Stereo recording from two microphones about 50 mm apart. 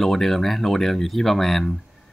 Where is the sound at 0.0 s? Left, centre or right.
Centre.